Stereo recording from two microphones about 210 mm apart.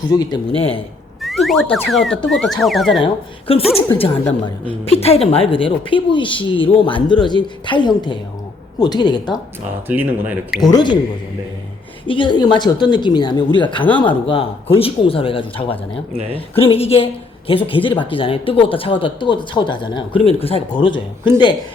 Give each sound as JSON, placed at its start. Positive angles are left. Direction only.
{"t": 0.1, "sound": "a woman's voice", "side_deg": 20}
{"t": 1.2, "sound": "a sound", "side_deg": 0}
{"t": 1.7, "sound": "speech", "side_deg": 0}
{"t": 3.0, "sound": "a woman's voice", "side_deg": 25}
{"t": 9.8, "sound": "speech", "side_deg": -10}
{"t": 10.6, "sound": "a woman's voice", "side_deg": 20}
{"t": 12.0, "sound": "a woman's voice", "side_deg": 25}